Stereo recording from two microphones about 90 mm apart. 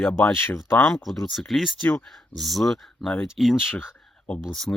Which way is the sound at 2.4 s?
Centre (ahead or behind).